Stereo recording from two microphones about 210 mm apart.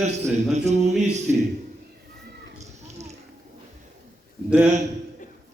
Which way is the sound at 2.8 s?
30° right (ahead or behind).